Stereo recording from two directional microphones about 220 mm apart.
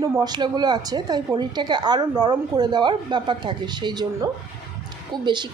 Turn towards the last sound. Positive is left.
turn(degrees=-20)  # may be behind; listen again after turning